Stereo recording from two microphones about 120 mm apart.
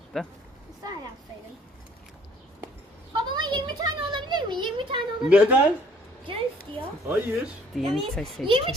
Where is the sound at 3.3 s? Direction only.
40° right (ahead or behind).